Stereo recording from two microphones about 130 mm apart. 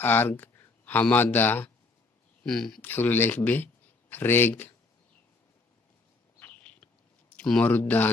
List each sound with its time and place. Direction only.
0.0 s speech: 15° left (ahead or behind)
2.4 s speech: 5° left (ahead or behind)
2.8 s speech: 15° left (ahead or behind)
6.4 s a sound: 10° left (ahead or behind)
7.3 s speech: 10° left (ahead or behind)